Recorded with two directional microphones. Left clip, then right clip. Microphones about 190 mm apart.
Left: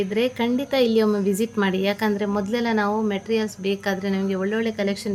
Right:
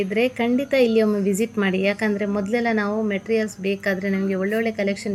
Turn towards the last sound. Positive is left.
turn(degrees=0)  # may be behind; listen again after turning